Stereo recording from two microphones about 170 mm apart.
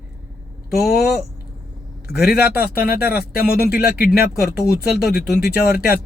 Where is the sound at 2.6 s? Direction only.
60° left (ahead or behind).